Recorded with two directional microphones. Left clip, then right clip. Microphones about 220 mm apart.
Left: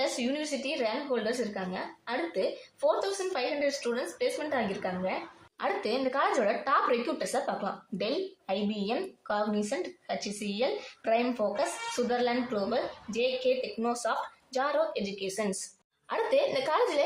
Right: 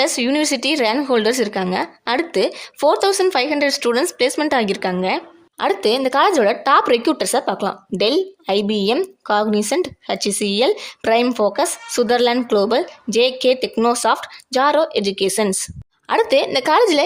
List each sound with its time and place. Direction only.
0.0 s a woman's voice: 60° right (ahead or behind)